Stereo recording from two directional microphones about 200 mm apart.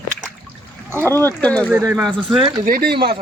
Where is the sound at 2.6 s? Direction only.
45° right (ahead or behind).